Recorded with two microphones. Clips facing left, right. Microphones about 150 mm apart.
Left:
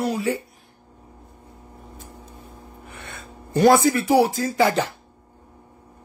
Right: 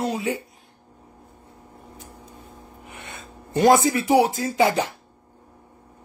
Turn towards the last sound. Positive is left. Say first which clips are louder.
# even
turn(degrees=-20)  # may be behind; listen again after turning